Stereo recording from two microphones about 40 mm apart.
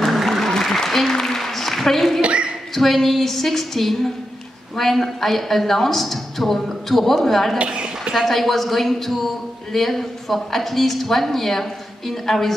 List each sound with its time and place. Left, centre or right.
0.0 s applause: centre
2.2 s a sound: right
2.7 s a woman's voice: centre
7.5 s a woman's voice: right
8.3 s a woman's voice: centre